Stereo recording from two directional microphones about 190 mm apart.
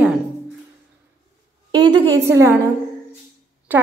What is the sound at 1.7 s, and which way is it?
Speech, 20° right (ahead or behind).